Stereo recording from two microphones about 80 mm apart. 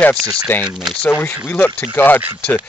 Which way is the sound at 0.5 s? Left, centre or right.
Left.